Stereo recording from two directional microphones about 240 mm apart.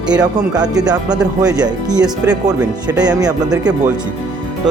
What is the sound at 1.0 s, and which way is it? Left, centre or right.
Speech, centre.